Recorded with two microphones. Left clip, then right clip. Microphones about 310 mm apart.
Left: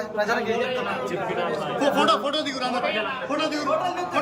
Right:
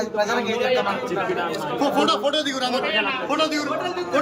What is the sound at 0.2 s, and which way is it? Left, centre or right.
Speech, right.